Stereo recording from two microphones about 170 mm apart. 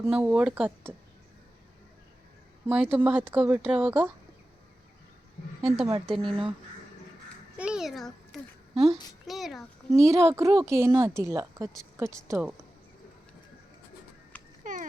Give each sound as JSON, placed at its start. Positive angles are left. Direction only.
{"t": 0.0, "sound": "a woman's voice", "side_deg": -10}
{"t": 2.6, "sound": "a woman's voice", "side_deg": -10}
{"t": 5.6, "sound": "a child's voice", "side_deg": 0}
{"t": 6.1, "sound": "speech", "side_deg": -30}
{"t": 7.5, "sound": "a sound", "side_deg": -5}
{"t": 8.7, "sound": "speech", "side_deg": -35}
{"t": 9.2, "sound": "a child's voice", "side_deg": 0}
{"t": 9.9, "sound": "a woman's voice", "side_deg": -15}
{"t": 14.6, "sound": "clip-clop", "side_deg": -50}